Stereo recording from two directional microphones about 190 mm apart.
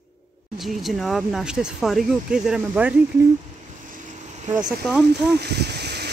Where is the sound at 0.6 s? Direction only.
Centre (ahead or behind).